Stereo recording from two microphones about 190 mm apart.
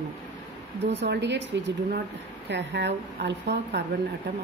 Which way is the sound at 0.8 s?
65° right (ahead or behind).